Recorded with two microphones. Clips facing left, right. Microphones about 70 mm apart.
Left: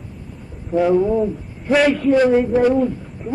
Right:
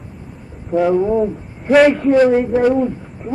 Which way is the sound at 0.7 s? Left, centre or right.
Right.